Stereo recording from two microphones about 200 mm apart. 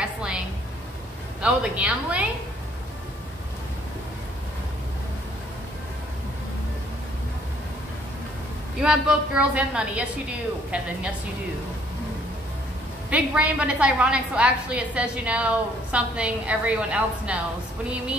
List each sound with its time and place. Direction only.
0.0 s a sound: 5° right (ahead or behind)
1.4 s a woman's voice: 5° right (ahead or behind)
8.8 s a woman's voice: 5° right (ahead or behind)
13.1 s a woman's voice: 5° right (ahead or behind)